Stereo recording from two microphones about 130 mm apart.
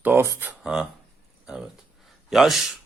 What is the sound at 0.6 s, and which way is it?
Speech, 5° right (ahead or behind).